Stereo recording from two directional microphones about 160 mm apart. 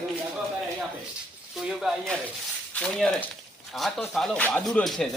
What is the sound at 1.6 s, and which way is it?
Speech, centre (ahead or behind).